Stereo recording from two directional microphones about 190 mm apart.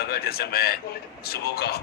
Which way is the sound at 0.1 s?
55° left (ahead or behind).